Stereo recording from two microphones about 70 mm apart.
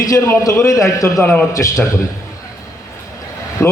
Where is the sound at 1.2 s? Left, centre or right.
Left.